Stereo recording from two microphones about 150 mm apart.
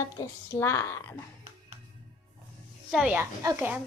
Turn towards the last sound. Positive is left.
turn(degrees=-15)  # may be behind; listen again after turning